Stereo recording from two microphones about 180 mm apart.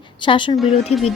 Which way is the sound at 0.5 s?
Centre (ahead or behind).